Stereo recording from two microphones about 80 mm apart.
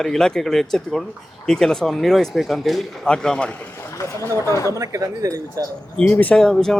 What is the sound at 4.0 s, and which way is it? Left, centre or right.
Speech, left.